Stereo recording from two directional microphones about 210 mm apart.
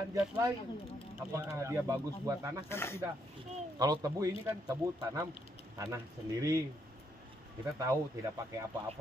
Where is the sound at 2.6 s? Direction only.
10° left (ahead or behind).